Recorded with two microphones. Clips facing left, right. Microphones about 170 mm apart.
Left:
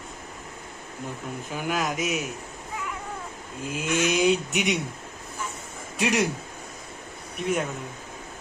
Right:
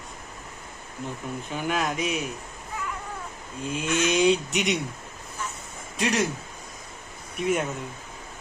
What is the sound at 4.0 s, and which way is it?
Speech, 5° left (ahead or behind).